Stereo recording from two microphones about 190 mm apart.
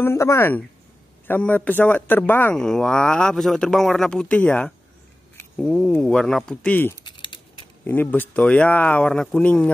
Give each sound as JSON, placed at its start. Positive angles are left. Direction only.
{"t": 0.0, "sound": "speech", "side_deg": 15}
{"t": 7.0, "sound": "a sound", "side_deg": 25}
{"t": 7.8, "sound": "speech", "side_deg": 10}